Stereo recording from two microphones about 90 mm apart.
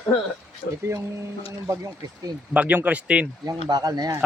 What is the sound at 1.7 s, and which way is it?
Speech, 40° right (ahead or behind).